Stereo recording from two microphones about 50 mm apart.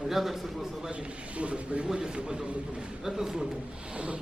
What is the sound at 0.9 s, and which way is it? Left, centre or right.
A man's voice, right.